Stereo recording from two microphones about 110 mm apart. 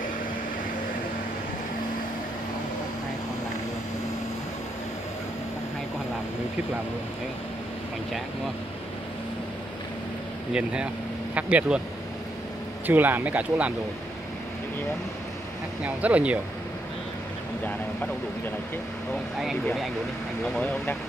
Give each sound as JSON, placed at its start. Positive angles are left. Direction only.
{"t": 10.5, "sound": "speech", "side_deg": -10}
{"t": 12.8, "sound": "speech", "side_deg": -15}
{"t": 15.8, "sound": "speech", "side_deg": -15}
{"t": 19.6, "sound": "speech", "side_deg": 0}